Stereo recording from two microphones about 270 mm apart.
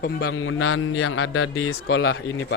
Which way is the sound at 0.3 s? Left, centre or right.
Left.